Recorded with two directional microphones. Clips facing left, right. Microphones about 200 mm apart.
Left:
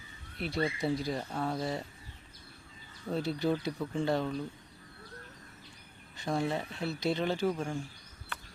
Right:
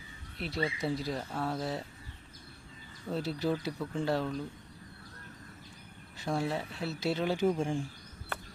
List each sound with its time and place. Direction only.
0.3 s speech: centre (ahead or behind)
3.1 s speech: centre (ahead or behind)
6.1 s speech: 5° right (ahead or behind)
7.3 s speech: 25° right (ahead or behind)